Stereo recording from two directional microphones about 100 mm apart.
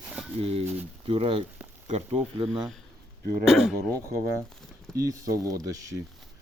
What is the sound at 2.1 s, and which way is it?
Speech, 80° right.